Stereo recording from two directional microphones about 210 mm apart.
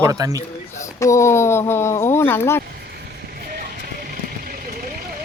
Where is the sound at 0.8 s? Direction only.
15° left (ahead or behind).